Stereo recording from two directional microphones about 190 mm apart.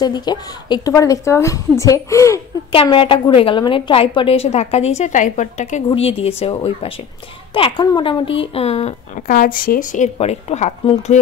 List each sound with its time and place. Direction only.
0.0 s a woman's voice: 20° left (ahead or behind)
2.7 s speech: 30° left (ahead or behind)